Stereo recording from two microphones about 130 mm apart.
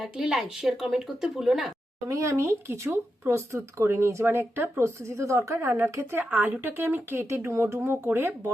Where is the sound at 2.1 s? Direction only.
25° right (ahead or behind).